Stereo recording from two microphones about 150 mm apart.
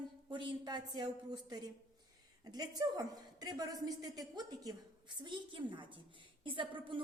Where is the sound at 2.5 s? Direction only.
25° right (ahead or behind).